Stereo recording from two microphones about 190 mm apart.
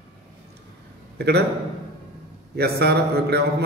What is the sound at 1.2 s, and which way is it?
Speech, 60° right (ahead or behind).